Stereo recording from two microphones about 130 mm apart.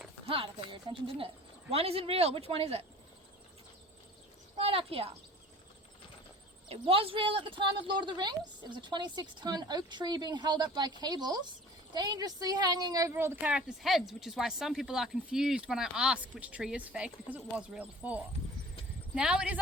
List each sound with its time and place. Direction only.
0.3 s speech: 40° right (ahead or behind)
4.5 s speech: 45° right (ahead or behind)
6.7 s speech: 45° right (ahead or behind); by 19.5 s 5° right (ahead or behind)